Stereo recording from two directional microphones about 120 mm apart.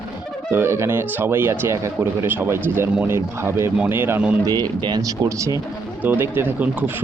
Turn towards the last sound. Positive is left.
turn(degrees=-15)  # may be behind; listen again after turning